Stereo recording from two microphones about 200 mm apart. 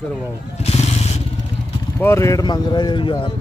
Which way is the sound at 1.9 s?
15° left (ahead or behind).